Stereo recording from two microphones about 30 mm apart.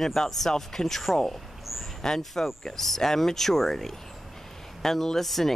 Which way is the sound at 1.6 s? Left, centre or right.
Centre.